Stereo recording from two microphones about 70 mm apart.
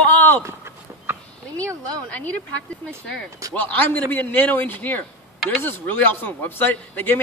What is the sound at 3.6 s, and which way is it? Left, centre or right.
A man's voice, left.